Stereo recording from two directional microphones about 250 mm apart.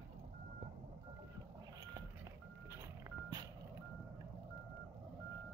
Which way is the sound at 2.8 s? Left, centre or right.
Centre.